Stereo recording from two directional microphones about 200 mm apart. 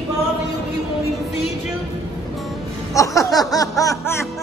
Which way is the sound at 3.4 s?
15° left (ahead or behind).